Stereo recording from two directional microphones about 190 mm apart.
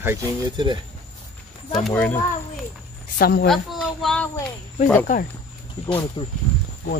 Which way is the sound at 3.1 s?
55° left (ahead or behind).